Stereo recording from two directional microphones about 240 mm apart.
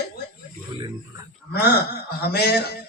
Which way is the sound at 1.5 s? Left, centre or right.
Left.